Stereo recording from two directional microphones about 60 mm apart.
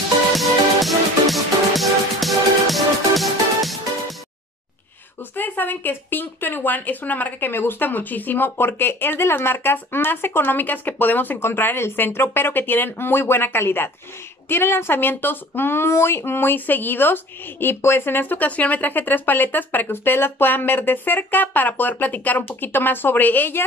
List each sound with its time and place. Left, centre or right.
0.4 s music: centre
5.3 s speech: left